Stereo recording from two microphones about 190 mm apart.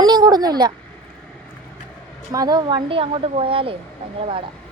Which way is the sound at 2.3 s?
20° right (ahead or behind).